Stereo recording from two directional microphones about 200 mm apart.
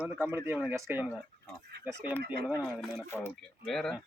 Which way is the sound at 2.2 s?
50° right (ahead or behind).